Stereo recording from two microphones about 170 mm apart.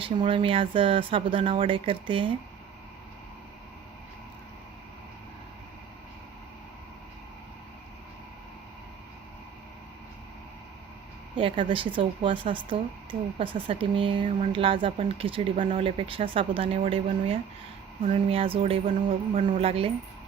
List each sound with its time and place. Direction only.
0.0 s speech: 30° right (ahead or behind)
11.3 s speech: 30° right (ahead or behind)
18.9 s music: 45° right (ahead or behind)
19.5 s speech: 35° right (ahead or behind)